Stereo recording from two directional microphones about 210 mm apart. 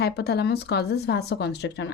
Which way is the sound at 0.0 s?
50° left (ahead or behind).